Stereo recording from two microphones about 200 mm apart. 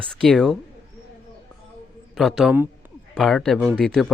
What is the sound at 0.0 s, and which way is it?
Speech, 5° left (ahead or behind).